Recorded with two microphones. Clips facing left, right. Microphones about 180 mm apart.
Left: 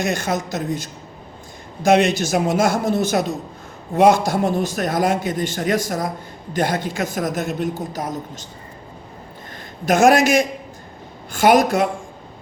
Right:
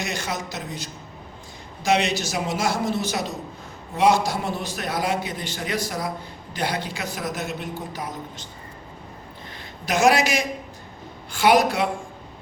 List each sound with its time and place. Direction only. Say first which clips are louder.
0.0 s a man's voice: left 7 dB; 50° left (ahead or behind)
9.8 s a man's voice: left 5 dB; 50° left (ahead or behind)